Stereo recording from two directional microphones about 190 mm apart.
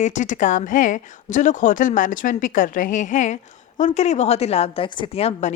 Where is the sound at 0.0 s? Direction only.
40° left (ahead or behind).